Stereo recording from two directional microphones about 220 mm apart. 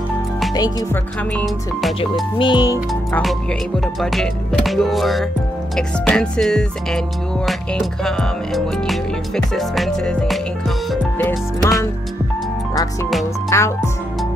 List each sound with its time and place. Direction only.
1.3 s music: centre (ahead or behind)
2.3 s speech: 20° left (ahead or behind)
2.9 s music: centre (ahead or behind)
13.5 s speech: 10° left (ahead or behind)